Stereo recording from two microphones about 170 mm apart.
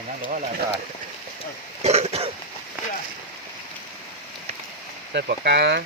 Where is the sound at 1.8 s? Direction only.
40° right (ahead or behind).